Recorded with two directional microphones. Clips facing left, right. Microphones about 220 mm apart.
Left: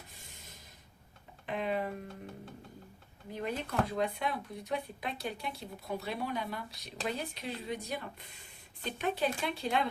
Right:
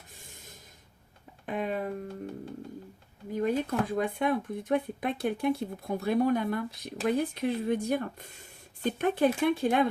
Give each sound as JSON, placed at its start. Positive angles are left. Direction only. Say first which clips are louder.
{"t": 0.2, "sound": "snort", "louder": "right 4 dB", "side_deg": -50}
{"t": 1.5, "sound": "a sound", "louder": "right 2 dB", "side_deg": -45}
{"t": 3.3, "sound": "speech", "louder": "right 6 dB", "side_deg": -50}